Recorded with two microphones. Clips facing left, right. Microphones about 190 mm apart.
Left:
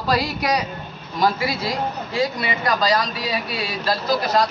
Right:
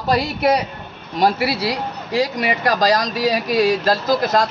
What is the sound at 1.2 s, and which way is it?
A man's voice, 75° right (ahead or behind).